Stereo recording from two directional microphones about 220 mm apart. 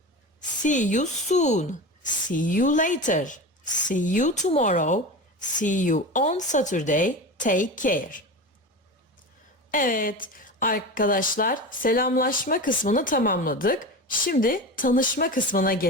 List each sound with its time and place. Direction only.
0.6 s speech: 35° left (ahead or behind)
9.7 s speech: 40° left (ahead or behind)